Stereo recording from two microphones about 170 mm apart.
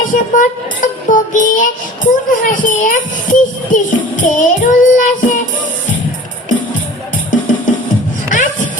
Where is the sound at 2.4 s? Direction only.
50° left (ahead or behind).